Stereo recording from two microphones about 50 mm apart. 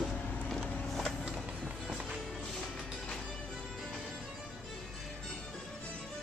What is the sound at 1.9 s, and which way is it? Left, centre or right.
Music, centre.